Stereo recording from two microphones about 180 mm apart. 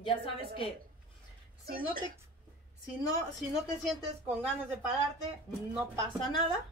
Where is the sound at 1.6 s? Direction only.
55° right (ahead or behind).